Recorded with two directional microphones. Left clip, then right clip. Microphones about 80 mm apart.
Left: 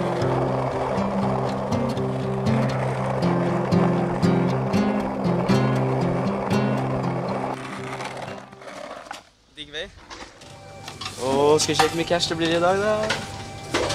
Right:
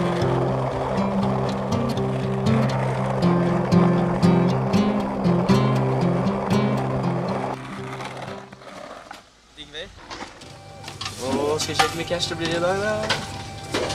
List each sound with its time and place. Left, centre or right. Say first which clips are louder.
0.0 s music: even; centre
11.4 s speech: left 3 dB; centre
12.4 s speech: left 3 dB; centre